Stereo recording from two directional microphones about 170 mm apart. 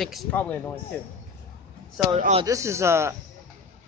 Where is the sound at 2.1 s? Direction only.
40° right (ahead or behind).